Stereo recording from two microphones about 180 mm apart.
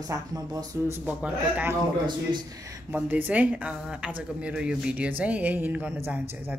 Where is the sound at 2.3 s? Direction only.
20° right (ahead or behind).